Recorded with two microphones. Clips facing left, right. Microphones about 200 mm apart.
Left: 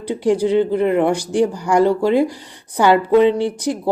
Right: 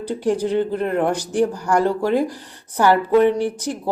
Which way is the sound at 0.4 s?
70° left (ahead or behind).